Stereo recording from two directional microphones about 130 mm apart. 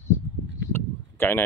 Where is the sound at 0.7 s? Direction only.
15° left (ahead or behind).